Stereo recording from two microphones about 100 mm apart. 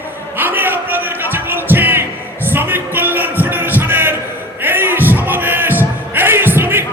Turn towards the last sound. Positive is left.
turn(degrees=-20)  # may be behind; listen again after turning